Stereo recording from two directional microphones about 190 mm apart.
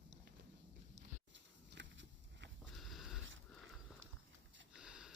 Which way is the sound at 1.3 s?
70° right (ahead or behind).